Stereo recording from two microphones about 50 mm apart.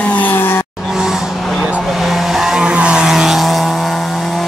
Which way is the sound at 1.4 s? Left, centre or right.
Centre.